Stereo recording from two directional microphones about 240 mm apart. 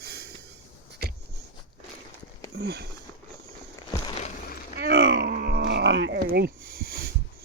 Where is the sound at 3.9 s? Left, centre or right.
Left.